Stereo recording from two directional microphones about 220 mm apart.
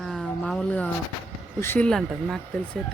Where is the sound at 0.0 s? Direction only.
Centre (ahead or behind).